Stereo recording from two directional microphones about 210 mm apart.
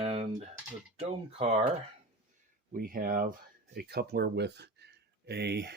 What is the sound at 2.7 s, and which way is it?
Speech, 40° right (ahead or behind).